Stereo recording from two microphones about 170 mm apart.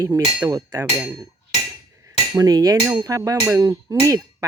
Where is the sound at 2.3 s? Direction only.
20° right (ahead or behind).